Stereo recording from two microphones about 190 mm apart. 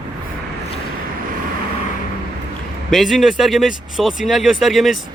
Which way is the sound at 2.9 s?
Centre (ahead or behind).